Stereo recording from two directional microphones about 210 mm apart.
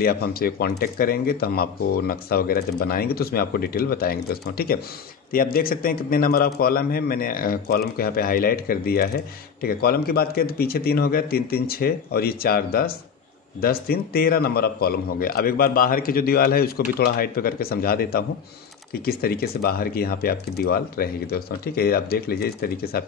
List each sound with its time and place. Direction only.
0.0 s a man's voice: 45° left (ahead or behind)